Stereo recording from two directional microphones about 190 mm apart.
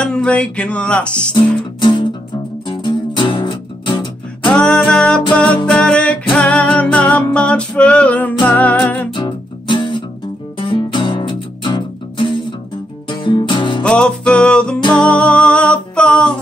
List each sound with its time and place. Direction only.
0.0 s speech: 5° left (ahead or behind)
1.3 s music: 25° left (ahead or behind)
4.5 s music: 5° left (ahead or behind)
9.1 s music: 25° left (ahead or behind)
13.8 s music: 5° left (ahead or behind)